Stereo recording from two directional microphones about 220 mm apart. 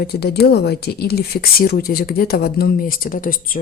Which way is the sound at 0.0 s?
45° left (ahead or behind).